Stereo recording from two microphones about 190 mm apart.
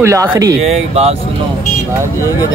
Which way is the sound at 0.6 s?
35° right (ahead or behind).